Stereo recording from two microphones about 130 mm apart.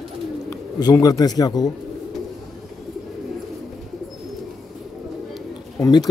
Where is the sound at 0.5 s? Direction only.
30° left (ahead or behind).